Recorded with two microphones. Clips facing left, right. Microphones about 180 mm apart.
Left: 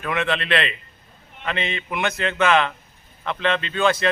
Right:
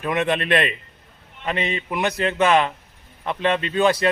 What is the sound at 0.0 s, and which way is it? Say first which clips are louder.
Speech: right 3 dB; 20° right (ahead or behind).